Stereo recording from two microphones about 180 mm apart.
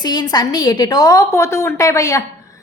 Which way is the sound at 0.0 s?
25° left (ahead or behind).